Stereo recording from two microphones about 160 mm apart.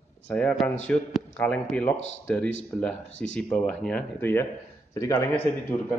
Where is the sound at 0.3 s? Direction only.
5° left (ahead or behind).